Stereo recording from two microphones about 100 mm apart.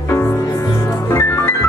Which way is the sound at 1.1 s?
25° left (ahead or behind).